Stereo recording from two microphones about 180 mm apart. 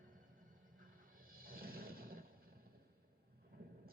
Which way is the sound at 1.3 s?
55° right (ahead or behind).